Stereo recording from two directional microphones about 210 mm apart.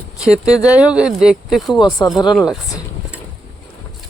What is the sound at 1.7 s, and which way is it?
Speech, 20° left (ahead or behind).